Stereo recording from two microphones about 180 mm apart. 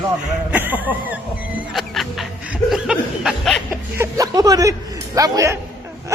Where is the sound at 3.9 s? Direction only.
15° right (ahead or behind).